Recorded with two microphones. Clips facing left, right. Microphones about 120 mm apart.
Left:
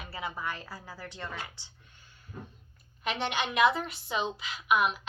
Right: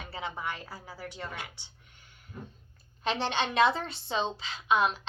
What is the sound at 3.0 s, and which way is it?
A woman's voice, 30° right (ahead or behind).